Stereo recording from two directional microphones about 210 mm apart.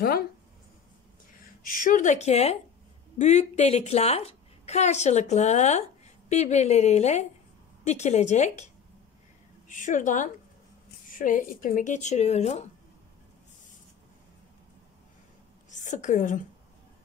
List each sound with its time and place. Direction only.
0.0 s speech: 45° left (ahead or behind)
1.6 s a woman's voice: 40° left (ahead or behind)
9.7 s a woman's voice: 35° left (ahead or behind)
15.7 s a woman's voice: 35° left (ahead or behind)